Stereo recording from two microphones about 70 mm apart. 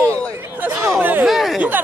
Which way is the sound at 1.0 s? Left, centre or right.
Right.